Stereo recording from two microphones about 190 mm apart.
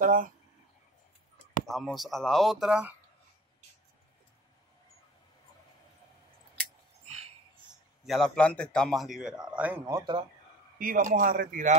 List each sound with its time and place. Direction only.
0.0 s speech: 45° right (ahead or behind)
1.7 s a man's voice: centre (ahead or behind)
8.0 s a man's voice: centre (ahead or behind)
9.8 s speech: 20° right (ahead or behind)
10.8 s a man's voice: 45° right (ahead or behind)